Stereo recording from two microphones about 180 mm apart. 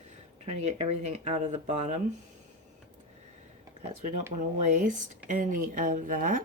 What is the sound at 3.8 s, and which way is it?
Speech, 40° right (ahead or behind).